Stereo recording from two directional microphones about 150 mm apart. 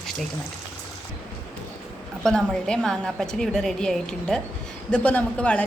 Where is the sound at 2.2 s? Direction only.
5° left (ahead or behind).